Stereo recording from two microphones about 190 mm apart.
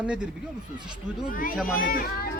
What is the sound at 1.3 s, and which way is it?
Speech, 50° left (ahead or behind).